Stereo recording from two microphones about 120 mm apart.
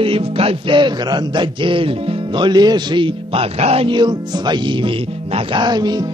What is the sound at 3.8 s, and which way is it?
Speech, 40° right (ahead or behind).